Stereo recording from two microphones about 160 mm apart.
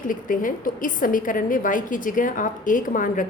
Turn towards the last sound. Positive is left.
turn(degrees=55)  # may be behind; listen again after turning